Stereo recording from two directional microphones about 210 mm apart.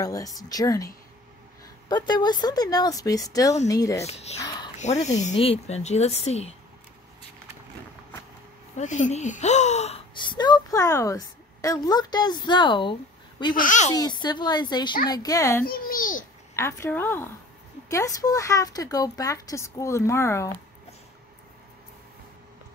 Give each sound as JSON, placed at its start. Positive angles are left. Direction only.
{"t": 0.0, "sound": "a woman's voice", "side_deg": 15}
{"t": 4.0, "sound": "speech", "side_deg": 30}
{"t": 4.4, "sound": "speech", "side_deg": 20}
{"t": 4.7, "sound": "speech", "side_deg": 35}
{"t": 8.7, "sound": "speech", "side_deg": 35}
{"t": 13.6, "sound": "speech", "side_deg": 35}
{"t": 13.9, "sound": "a woman's voice", "side_deg": 20}
{"t": 15.6, "sound": "babbling", "side_deg": 40}
{"t": 16.5, "sound": "a woman's voice", "side_deg": 15}